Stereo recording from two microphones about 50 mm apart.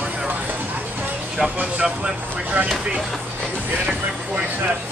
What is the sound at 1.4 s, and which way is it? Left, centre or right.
Speech, centre.